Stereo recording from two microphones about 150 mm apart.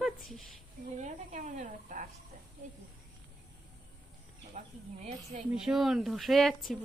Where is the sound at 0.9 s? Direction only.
55° right (ahead or behind).